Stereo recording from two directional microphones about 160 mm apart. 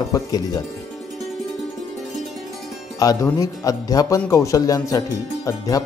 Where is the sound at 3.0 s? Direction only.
20° left (ahead or behind).